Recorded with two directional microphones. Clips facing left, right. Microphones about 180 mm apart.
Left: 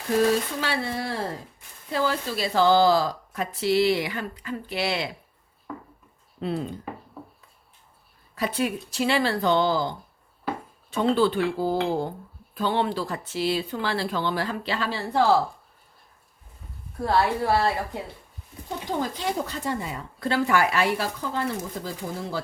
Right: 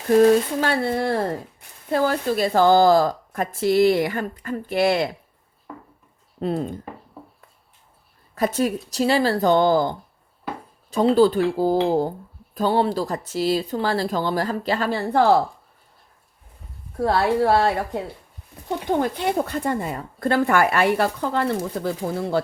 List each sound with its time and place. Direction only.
0.2 s speech: 50° right (ahead or behind)
6.4 s speech: 45° right (ahead or behind)
8.4 s speech: 45° right (ahead or behind)
11.1 s speech: 40° right (ahead or behind)
17.0 s speech: 60° right (ahead or behind)
18.9 s speech: 60° right (ahead or behind)